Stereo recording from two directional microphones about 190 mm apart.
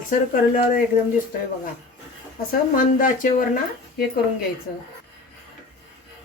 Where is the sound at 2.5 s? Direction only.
45° left (ahead or behind).